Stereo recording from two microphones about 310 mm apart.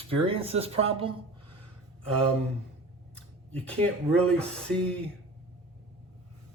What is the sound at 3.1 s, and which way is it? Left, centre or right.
Speech, centre.